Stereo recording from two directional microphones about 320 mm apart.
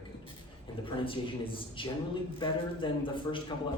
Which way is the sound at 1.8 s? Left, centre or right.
Centre.